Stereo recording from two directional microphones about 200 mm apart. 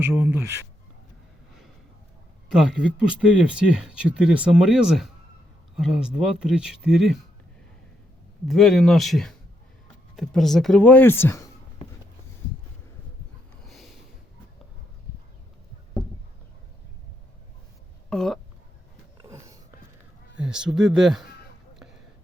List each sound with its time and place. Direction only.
0.0 s speech: 10° right (ahead or behind)
2.5 s speech: centre (ahead or behind)
8.4 s speech: centre (ahead or behind)
13.7 s a sound: centre (ahead or behind)
18.1 s speech: centre (ahead or behind)
19.1 s dog: 15° right (ahead or behind)
20.4 s speech: 5° right (ahead or behind)